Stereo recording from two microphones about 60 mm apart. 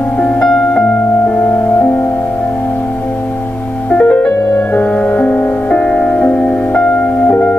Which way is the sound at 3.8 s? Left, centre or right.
Left.